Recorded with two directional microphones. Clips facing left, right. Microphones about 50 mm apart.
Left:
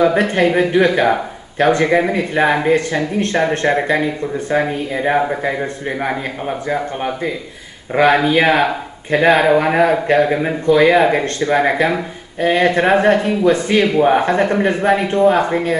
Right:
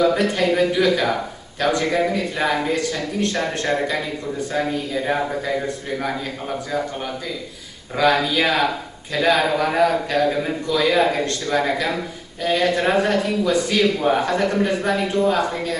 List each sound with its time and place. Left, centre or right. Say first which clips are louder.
0.0 s speech: left 4 dB; left